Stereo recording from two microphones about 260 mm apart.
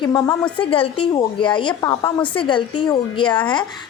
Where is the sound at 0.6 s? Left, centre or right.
Left.